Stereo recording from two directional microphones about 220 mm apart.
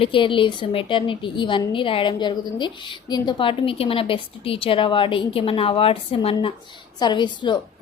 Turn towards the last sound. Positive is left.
turn(degrees=20)  # may be behind; listen again after turning